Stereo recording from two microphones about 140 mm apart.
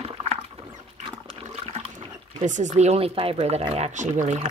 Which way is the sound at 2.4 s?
60° right (ahead or behind).